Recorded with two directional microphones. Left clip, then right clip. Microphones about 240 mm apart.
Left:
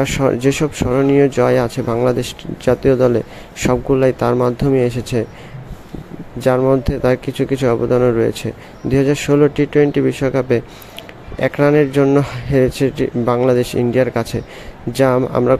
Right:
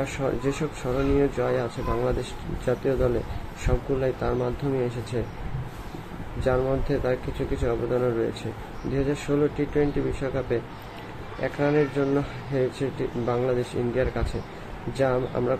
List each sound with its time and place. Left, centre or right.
0.0 s speech: left
6.4 s speech: left